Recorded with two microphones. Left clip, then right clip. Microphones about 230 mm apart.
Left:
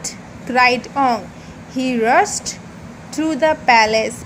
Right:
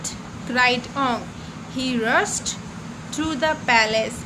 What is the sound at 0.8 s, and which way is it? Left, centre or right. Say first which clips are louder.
A woman's voice: left 6 dB; centre.